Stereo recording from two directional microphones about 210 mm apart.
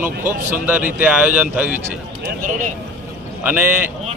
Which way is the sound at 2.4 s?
35° right (ahead or behind).